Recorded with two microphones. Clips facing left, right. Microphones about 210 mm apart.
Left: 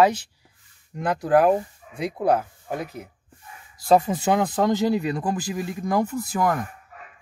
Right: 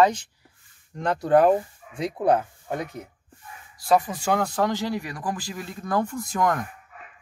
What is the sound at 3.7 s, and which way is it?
Speech, 25° left (ahead or behind).